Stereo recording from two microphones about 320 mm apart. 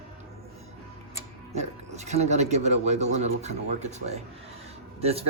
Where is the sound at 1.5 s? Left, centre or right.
Right.